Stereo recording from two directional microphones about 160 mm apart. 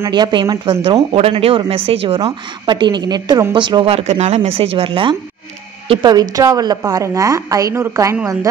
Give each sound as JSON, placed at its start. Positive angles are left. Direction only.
{"t": 0.0, "sound": "speech", "side_deg": -25}